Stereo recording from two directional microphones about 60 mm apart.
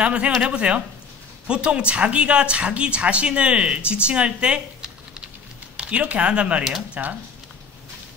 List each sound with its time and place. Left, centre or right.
0.0 s a woman's voice: centre